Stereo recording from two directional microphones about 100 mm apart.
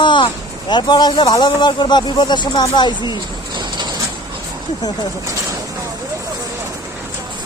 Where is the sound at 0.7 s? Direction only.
50° left (ahead or behind).